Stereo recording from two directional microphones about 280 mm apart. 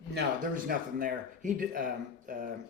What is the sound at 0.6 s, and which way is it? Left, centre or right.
Speech, right.